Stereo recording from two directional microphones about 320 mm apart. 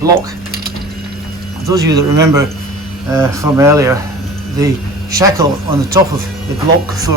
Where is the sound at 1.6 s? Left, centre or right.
Centre.